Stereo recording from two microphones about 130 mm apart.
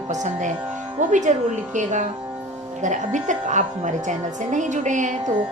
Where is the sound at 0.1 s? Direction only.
70° right (ahead or behind).